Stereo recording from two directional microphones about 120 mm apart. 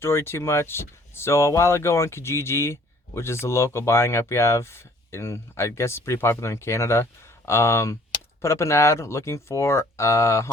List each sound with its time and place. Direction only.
0.0 s speech: 20° left (ahead or behind)